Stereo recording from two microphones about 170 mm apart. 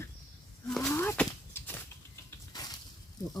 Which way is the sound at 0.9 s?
10° left (ahead or behind).